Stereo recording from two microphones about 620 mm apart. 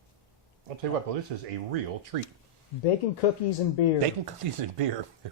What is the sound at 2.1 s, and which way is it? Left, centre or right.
Speech, right.